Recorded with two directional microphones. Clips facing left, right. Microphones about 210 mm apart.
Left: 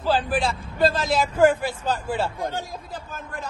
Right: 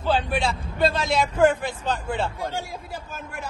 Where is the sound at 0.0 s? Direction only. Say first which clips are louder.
Left 1 dB; centre (ahead or behind).